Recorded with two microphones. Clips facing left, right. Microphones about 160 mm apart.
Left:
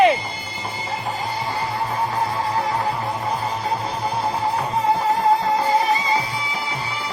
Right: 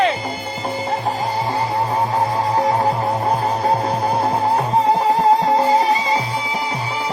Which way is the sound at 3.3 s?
50° right (ahead or behind).